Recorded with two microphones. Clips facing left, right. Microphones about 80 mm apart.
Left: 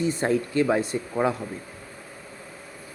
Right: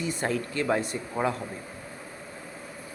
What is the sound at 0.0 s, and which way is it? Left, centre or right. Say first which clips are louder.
Speech: left 5 dB; left.